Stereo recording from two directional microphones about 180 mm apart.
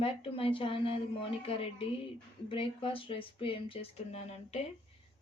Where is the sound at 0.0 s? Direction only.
30° left (ahead or behind).